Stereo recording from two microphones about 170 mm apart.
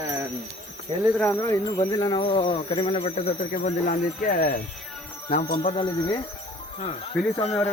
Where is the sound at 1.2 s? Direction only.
15° left (ahead or behind); by 3.4 s 35° left (ahead or behind).